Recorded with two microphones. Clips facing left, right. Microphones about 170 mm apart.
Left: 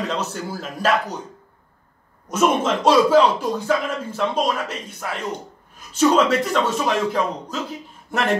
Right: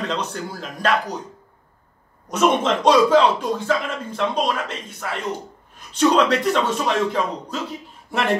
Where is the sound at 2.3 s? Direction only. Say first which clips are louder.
Even; 5° left (ahead or behind).